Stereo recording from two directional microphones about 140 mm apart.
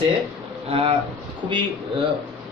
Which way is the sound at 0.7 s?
40° right (ahead or behind).